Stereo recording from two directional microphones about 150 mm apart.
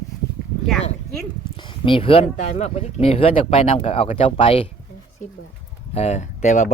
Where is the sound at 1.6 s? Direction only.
35° left (ahead or behind).